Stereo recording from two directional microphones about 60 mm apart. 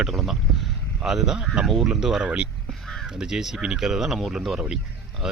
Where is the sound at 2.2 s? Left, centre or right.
Centre.